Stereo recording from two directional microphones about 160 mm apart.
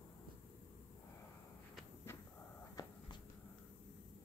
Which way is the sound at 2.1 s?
15° left (ahead or behind).